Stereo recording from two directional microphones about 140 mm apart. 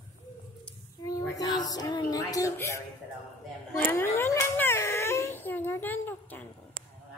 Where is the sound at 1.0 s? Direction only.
25° left (ahead or behind).